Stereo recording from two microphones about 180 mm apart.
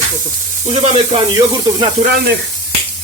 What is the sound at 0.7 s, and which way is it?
Speech, 40° right (ahead or behind).